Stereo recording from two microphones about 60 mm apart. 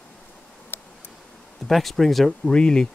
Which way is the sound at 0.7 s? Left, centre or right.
Left.